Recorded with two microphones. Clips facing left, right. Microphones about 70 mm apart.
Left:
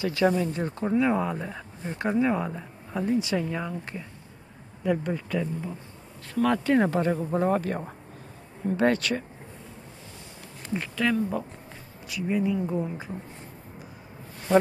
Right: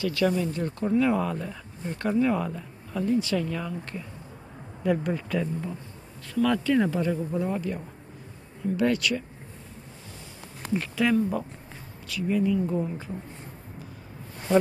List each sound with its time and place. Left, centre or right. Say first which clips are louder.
0.0 s speech: left 1 dB; left
4.8 s speech: right 1 dB; centre
6.2 s speech: even; left
8.7 s speech: left 1 dB; left
10.7 s speech: right 2 dB; centre
12.1 s speech: right 1 dB; centre